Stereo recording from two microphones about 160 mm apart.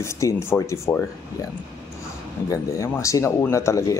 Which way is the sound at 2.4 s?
20° left (ahead or behind).